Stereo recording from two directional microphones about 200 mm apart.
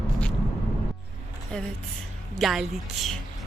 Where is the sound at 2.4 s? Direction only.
Centre (ahead or behind).